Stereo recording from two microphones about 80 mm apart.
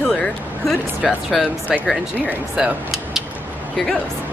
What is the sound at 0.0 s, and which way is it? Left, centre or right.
Vehicle, centre.